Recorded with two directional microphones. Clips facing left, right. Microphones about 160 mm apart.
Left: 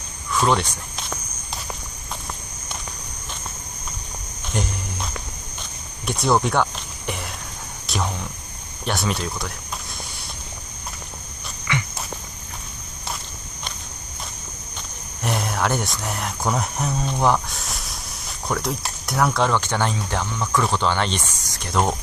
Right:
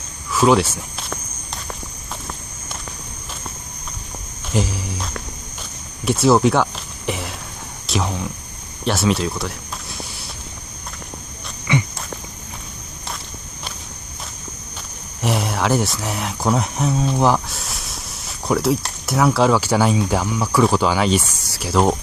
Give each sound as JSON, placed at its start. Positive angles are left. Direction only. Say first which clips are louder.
{"t": 0.3, "sound": "speech", "louder": "right 5 dB", "side_deg": -5}
{"t": 4.5, "sound": "cricket", "louder": "right 5 dB", "side_deg": -5}
{"t": 6.0, "sound": "a sound", "louder": "right 6 dB", "side_deg": -5}
{"t": 7.8, "sound": "cricket", "louder": "right 4 dB", "side_deg": 0}
{"t": 8.8, "sound": "speech", "louder": "right 6 dB", "side_deg": 0}
{"t": 11.7, "sound": "walk", "louder": "right 6 dB", "side_deg": -20}
{"t": 15.2, "sound": "speech", "louder": "right 3 dB", "side_deg": 0}